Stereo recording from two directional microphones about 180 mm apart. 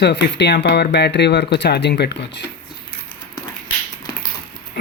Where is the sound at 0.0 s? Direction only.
70° left (ahead or behind).